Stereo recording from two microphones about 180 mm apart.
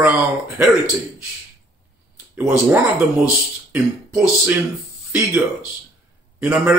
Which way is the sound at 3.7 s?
10° right (ahead or behind).